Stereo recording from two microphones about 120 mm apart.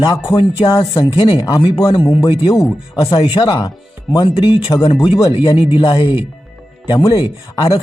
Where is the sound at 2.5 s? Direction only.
30° left (ahead or behind).